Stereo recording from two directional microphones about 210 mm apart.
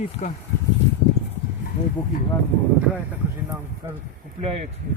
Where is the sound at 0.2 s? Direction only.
35° left (ahead or behind).